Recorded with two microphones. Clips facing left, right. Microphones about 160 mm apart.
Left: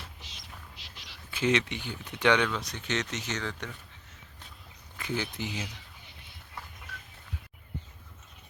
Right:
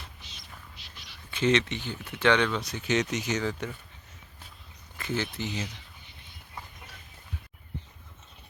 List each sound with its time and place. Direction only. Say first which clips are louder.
0.2 s music: even; 90° left
1.3 s speech: right 2 dB; 10° left (ahead or behind)
2.5 s speech: right 5 dB; centre (ahead or behind)
4.9 s speech: right 2 dB; 15° left (ahead or behind)